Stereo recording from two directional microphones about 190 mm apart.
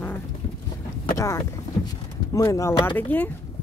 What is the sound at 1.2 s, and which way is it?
Speech, 15° left (ahead or behind).